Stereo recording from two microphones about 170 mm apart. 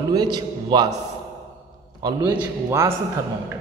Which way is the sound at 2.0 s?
25° right (ahead or behind).